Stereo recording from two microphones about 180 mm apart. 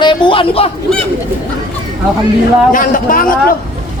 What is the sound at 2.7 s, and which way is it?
Speech, 50° left (ahead or behind).